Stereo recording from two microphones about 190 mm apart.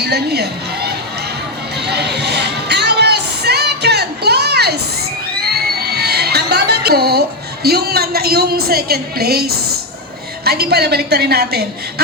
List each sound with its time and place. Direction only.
0.0 s speech: 60° right (ahead or behind)
1.8 s music: 60° right (ahead or behind)
5.4 s a sound: 55° right (ahead or behind)
10.4 s a woman's voice: 55° right (ahead or behind)